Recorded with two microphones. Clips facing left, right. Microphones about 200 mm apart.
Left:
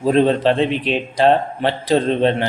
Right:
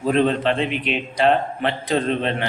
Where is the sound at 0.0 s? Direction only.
35° left (ahead or behind).